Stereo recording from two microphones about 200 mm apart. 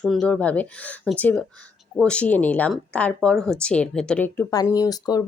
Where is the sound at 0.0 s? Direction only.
Centre (ahead or behind).